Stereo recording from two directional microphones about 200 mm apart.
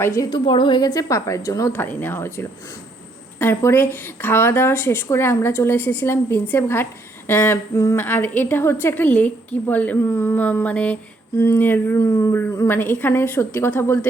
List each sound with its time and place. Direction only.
0.0 s a woman's voice: 15° left (ahead or behind)
3.3 s a woman's voice: 10° left (ahead or behind)